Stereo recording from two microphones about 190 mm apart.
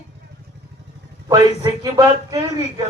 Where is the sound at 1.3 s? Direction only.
20° right (ahead or behind).